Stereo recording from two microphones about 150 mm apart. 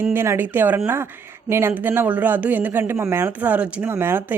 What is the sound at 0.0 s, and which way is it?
A woman's voice, 15° right (ahead or behind).